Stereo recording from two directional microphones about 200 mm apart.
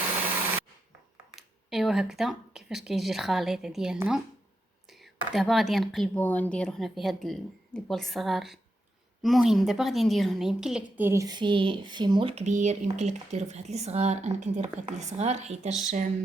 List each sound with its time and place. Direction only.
1.4 s a woman's voice: centre (ahead or behind); by 15.7 s 35° right (ahead or behind)